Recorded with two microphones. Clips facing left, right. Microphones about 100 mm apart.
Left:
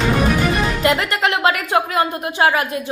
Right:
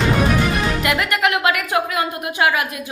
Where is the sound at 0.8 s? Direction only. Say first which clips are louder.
Left 2 dB; 30° left (ahead or behind).